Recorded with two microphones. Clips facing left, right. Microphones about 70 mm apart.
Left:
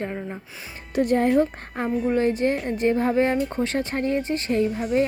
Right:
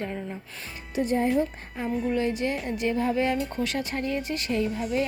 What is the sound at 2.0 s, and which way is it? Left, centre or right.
Speech, left.